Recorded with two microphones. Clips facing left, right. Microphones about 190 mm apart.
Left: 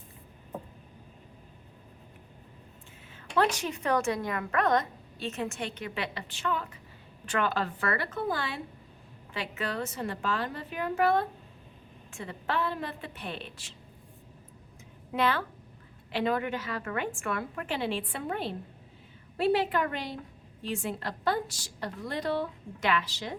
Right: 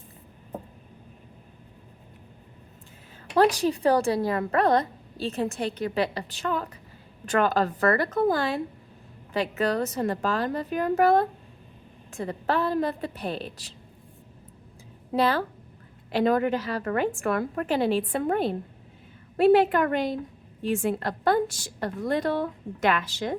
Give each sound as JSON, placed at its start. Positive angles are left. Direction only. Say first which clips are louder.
{"t": 3.3, "sound": "a woman's voice", "louder": "right 7 dB", "side_deg": -35}
{"t": 15.1, "sound": "a woman's voice", "louder": "right 5 dB", "side_deg": -35}